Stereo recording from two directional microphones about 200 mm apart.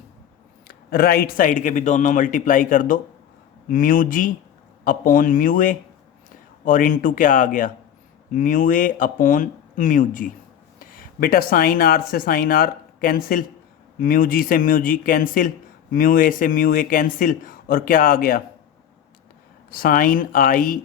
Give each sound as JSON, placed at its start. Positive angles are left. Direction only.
{"t": 0.7, "sound": "speech", "side_deg": 50}
{"t": 19.7, "sound": "speech", "side_deg": 45}